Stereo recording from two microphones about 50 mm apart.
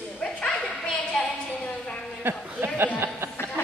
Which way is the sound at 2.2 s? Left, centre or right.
Right.